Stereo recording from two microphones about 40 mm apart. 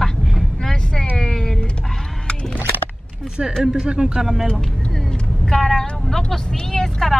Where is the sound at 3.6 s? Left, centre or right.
Centre.